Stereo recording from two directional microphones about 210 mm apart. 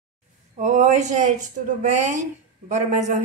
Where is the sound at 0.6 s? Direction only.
35° right (ahead or behind).